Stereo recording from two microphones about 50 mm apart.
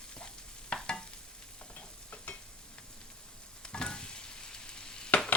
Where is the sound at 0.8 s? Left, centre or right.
Centre.